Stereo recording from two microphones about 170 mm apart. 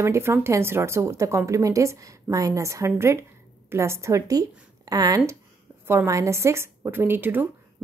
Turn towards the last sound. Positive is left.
turn(degrees=-10)  # may be behind; listen again after turning